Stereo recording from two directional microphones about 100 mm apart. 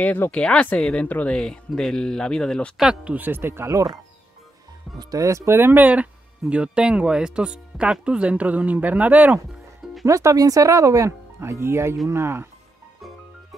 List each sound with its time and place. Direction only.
0.0 s speech: 15° left (ahead or behind)
2.8 s speech: 10° right (ahead or behind)
10.0 s speech: 30° right (ahead or behind)